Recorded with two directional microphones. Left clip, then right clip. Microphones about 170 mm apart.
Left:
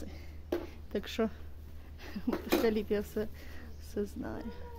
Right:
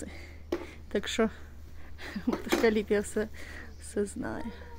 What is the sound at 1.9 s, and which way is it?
Speech, 20° right (ahead or behind).